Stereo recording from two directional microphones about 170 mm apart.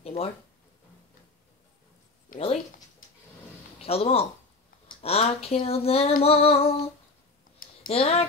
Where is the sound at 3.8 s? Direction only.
35° left (ahead or behind).